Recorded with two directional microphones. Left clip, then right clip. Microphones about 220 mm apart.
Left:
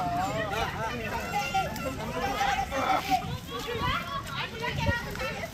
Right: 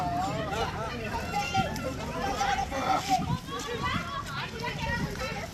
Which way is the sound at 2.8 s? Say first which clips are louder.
Left 2 dB; centre (ahead or behind).